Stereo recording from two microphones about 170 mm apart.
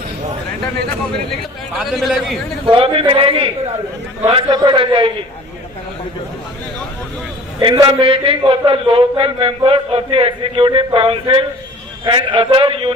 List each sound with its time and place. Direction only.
1.8 s a man's voice: centre (ahead or behind)
2.6 s a man's voice: 30° right (ahead or behind)
7.6 s a man's voice: 25° right (ahead or behind)